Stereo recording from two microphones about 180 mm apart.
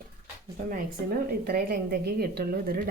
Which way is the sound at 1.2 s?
60° right (ahead or behind).